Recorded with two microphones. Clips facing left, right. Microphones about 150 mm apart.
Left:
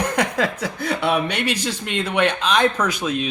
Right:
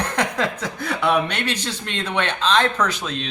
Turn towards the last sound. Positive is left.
turn(degrees=10)  # may be behind; listen again after turning